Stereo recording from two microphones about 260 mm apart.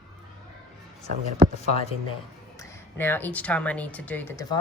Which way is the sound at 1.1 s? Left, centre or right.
Right.